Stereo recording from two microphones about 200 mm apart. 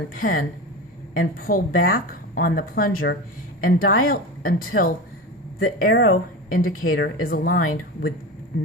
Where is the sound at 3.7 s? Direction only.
90° left.